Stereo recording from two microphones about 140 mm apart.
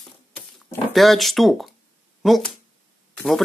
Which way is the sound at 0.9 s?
Centre (ahead or behind).